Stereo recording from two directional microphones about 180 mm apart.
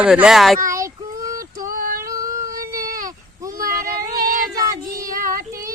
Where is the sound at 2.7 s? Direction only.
20° right (ahead or behind).